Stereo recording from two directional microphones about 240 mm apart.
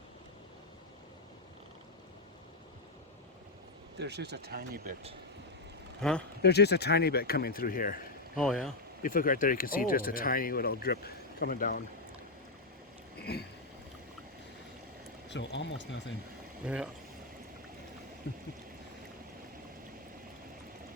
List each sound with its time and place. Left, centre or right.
3.9 s speech: right
6.0 s speech: centre
6.4 s speech: left
8.4 s speech: centre
9.0 s speech: left
13.1 s boat: left
15.3 s speech: left
16.6 s speech: centre